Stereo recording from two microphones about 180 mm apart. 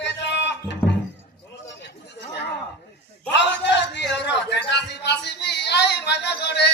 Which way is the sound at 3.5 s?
80° left.